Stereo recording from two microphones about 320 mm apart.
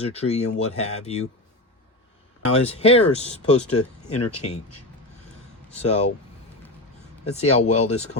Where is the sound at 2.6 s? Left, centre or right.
Centre.